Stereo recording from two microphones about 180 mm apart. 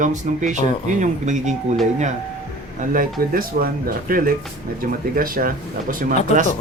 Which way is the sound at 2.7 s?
50° right (ahead or behind).